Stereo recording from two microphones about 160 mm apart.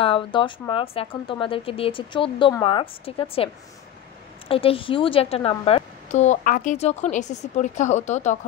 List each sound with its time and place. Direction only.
0.0 s speech: 35° left (ahead or behind)
4.5 s speech: 35° left (ahead or behind)
6.0 s speech: 45° left (ahead or behind)